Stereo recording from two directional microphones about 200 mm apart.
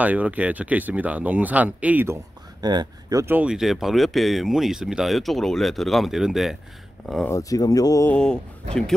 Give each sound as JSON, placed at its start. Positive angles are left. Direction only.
{"t": 0.0, "sound": "speech", "side_deg": -5}
{"t": 2.6, "sound": "speech", "side_deg": -20}
{"t": 7.2, "sound": "speech", "side_deg": 15}
{"t": 8.1, "sound": "speech", "side_deg": 5}